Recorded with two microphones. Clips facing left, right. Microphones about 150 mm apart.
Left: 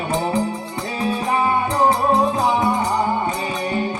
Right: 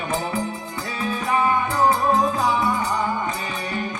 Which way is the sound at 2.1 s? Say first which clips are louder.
Left 3 dB; 35° left (ahead or behind).